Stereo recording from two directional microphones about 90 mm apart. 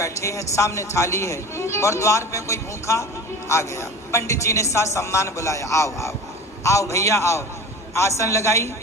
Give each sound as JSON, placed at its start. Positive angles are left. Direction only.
{"t": 0.0, "sound": "speech", "side_deg": 35}